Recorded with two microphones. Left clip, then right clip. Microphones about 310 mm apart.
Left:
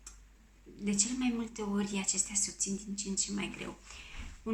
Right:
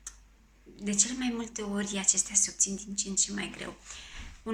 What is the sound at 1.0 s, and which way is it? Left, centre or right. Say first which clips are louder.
Speech: right 1 dB; centre.